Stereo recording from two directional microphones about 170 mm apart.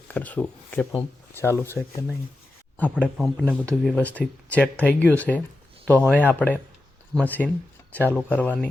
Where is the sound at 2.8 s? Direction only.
10° left (ahead or behind).